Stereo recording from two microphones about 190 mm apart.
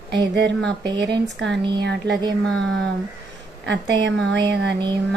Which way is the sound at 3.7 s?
70° right (ahead or behind).